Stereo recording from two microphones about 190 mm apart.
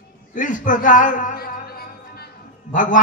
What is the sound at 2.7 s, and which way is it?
Mantra, 45° left (ahead or behind).